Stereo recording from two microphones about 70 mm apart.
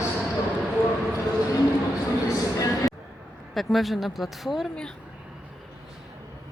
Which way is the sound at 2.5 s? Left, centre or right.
Left.